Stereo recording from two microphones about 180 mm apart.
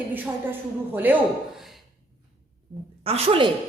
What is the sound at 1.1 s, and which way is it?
Speech, 10° right (ahead or behind).